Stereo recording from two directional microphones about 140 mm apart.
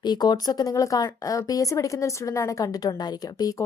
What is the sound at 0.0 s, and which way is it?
A woman's voice, 30° left (ahead or behind).